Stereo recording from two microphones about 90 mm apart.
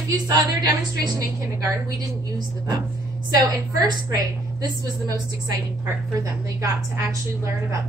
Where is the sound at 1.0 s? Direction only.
40° right (ahead or behind).